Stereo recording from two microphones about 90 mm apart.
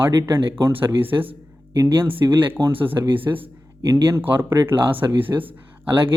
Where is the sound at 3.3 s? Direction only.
40° right (ahead or behind).